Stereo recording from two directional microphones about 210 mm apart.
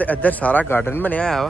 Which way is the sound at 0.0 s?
10° left (ahead or behind).